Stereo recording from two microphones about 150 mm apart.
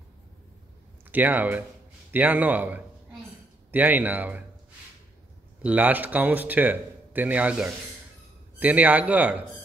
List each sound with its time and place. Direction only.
1.1 s speech: 10° right (ahead or behind)
5.6 s speech: 10° right (ahead or behind)